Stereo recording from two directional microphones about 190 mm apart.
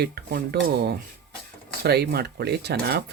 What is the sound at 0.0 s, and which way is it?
Speech, 55° right (ahead or behind).